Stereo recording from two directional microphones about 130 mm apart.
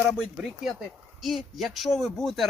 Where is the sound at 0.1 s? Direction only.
Centre (ahead or behind).